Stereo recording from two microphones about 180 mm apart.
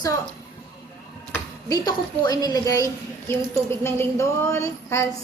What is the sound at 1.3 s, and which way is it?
Speech, 20° left (ahead or behind).